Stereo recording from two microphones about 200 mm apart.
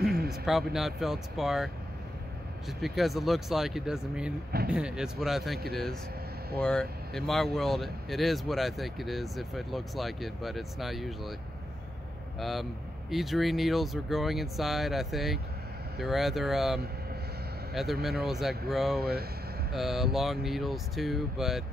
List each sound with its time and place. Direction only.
0.3 s speech: centre (ahead or behind)
2.8 s speech: centre (ahead or behind)
6.6 s speech: 5° left (ahead or behind)
12.4 s speech: centre (ahead or behind)
18.0 s speech: centre (ahead or behind)
18.9 s speech: 50° right (ahead or behind)
19.7 s speech: centre (ahead or behind)